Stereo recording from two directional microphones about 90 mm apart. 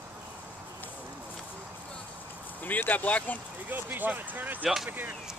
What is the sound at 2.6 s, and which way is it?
Speech, 20° left (ahead or behind).